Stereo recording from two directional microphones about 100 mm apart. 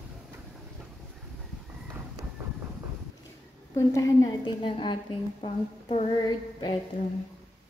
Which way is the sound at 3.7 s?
35° left (ahead or behind).